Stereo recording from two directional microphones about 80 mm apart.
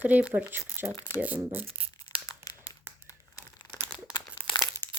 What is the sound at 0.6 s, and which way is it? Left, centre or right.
Speech, right.